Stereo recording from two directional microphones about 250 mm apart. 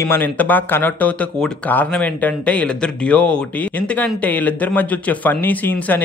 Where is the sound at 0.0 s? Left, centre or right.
Centre.